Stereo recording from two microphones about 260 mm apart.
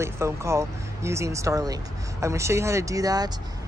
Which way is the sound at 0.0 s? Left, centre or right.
Centre.